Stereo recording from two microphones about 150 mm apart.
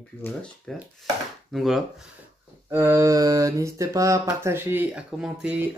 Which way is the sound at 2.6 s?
20° right (ahead or behind).